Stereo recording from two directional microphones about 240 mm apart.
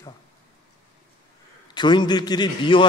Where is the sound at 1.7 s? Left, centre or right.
Centre.